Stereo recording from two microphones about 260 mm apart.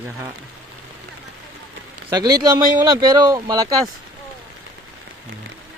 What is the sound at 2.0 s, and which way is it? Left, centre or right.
A man's voice, centre.